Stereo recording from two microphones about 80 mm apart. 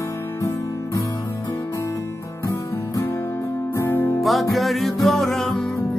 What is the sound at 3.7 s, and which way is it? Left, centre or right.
Music, left.